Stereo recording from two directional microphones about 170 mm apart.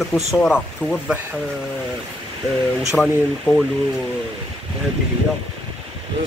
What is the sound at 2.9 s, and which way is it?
Speech, centre (ahead or behind).